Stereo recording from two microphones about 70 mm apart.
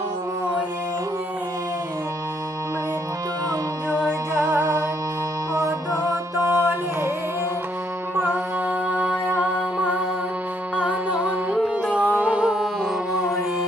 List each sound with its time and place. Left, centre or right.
5.5 s music: right
8.1 s music: right; by 13.4 s centre